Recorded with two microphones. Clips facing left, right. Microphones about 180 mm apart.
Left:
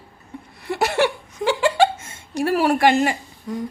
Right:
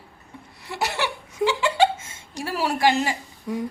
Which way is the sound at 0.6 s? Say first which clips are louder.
Left 7 dB; 55° left (ahead or behind).